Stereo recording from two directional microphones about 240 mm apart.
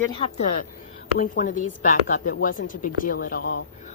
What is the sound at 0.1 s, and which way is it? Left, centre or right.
Speech, left.